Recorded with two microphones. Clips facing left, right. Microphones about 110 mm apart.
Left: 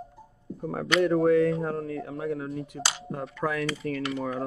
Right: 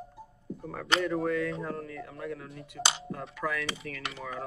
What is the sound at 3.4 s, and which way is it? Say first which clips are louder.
Speech: left 6 dB; 30° left (ahead or behind).